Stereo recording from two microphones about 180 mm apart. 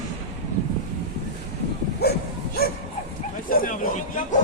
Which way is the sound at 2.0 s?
65° left (ahead or behind).